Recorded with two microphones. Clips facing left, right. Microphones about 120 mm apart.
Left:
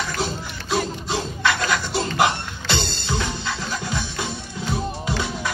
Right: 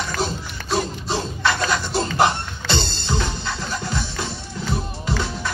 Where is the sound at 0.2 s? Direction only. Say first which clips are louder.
Right 1 dB; 15° left (ahead or behind).